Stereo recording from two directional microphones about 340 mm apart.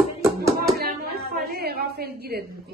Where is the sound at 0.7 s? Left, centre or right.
Right.